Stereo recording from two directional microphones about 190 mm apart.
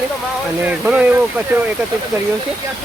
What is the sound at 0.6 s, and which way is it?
Speech, 10° right (ahead or behind).